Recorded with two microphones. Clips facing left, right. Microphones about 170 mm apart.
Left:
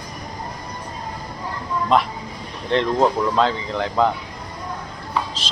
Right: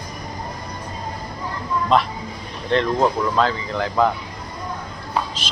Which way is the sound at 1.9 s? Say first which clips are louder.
Even; 15° left (ahead or behind).